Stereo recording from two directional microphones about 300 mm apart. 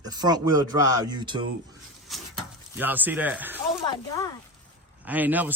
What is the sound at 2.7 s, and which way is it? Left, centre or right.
Speech, centre.